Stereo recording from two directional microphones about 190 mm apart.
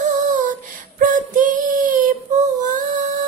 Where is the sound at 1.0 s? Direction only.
45° right (ahead or behind).